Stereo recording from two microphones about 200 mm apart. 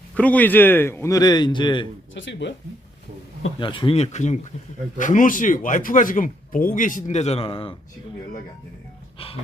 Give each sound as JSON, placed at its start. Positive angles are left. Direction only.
{"t": 0.2, "sound": "a man's voice", "side_deg": 5}
{"t": 2.1, "sound": "speech", "side_deg": 65}
{"t": 3.6, "sound": "speech", "side_deg": 25}
{"t": 9.1, "sound": "speech", "side_deg": 30}